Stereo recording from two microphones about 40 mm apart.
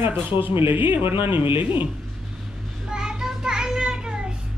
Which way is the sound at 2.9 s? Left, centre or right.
Centre.